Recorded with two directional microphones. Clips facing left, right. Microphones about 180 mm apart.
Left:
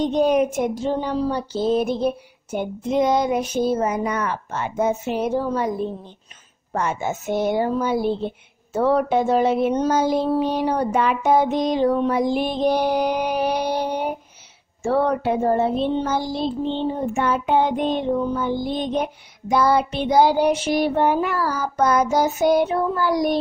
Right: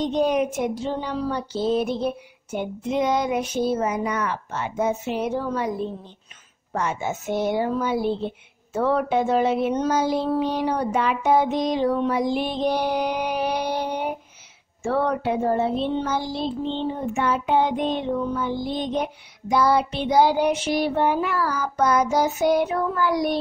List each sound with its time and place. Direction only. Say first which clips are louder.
0.0 s child singing: left 3 dB; 50° left (ahead or behind)
1.2 s speech: left 3 dB; 35° left (ahead or behind)
1.6 s child singing: left 3 dB; 45° left (ahead or behind)
8.7 s speech: left 3 dB; 40° left (ahead or behind)
10.4 s child singing: left 2 dB; 45° left (ahead or behind)
22.6 s speech: left 2 dB; 30° left (ahead or behind)